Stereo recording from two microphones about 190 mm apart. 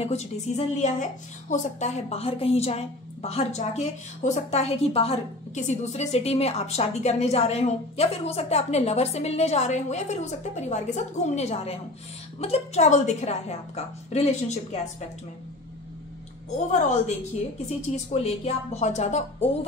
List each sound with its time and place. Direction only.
0.0 s a woman's voice: 35° left (ahead or behind)
16.4 s a woman's voice: 40° left (ahead or behind)